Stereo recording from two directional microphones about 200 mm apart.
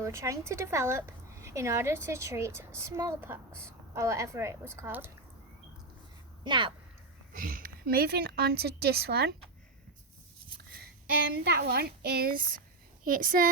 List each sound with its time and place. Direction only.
0.0 s speech: 15° right (ahead or behind)
6.4 s speech: 25° right (ahead or behind)
7.3 s a woman's voice: 45° right (ahead or behind)
10.6 s a child's voice: 50° right (ahead or behind)